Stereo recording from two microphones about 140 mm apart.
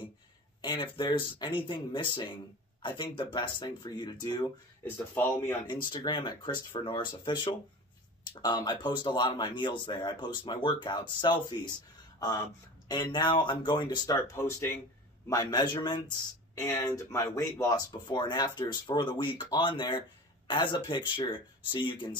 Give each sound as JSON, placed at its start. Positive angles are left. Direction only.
{"t": 0.6, "sound": "speech", "side_deg": 35}
{"t": 4.8, "sound": "speech", "side_deg": 15}
{"t": 5.7, "sound": "speech", "side_deg": 30}
{"t": 12.8, "sound": "speech", "side_deg": 30}
{"t": 15.2, "sound": "speech", "side_deg": 25}
{"t": 16.5, "sound": "speech", "side_deg": 20}